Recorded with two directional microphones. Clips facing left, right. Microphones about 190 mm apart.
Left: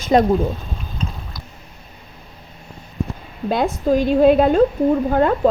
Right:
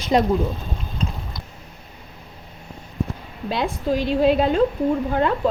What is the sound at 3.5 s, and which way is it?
A woman's voice, 50° left (ahead or behind).